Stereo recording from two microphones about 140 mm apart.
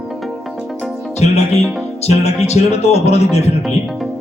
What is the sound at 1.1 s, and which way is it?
Speech, 50° left (ahead or behind).